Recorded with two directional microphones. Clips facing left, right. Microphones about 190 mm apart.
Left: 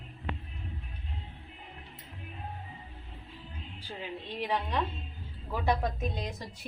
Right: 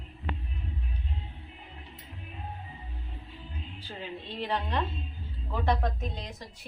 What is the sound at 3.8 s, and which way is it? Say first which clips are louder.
A woman's voice: left 1 dB; 10° left (ahead or behind).